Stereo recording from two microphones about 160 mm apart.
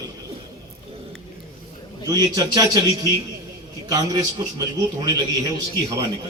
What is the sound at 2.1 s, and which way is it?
A man's voice, 20° right (ahead or behind).